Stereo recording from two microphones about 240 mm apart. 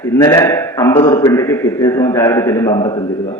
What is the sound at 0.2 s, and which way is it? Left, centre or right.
A man's voice, centre.